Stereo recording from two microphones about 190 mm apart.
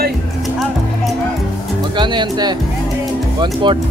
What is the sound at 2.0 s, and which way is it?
Speech, 25° right (ahead or behind).